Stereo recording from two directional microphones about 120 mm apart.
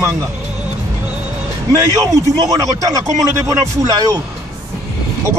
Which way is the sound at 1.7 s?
30° right (ahead or behind).